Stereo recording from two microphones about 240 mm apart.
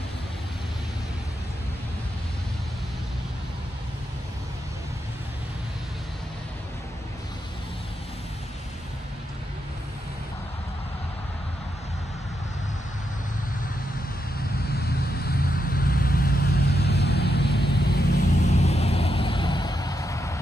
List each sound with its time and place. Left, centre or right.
15.1 s vehicle: left
18.5 s vehicle: left